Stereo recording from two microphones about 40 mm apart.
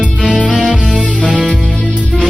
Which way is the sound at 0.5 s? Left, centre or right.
Right.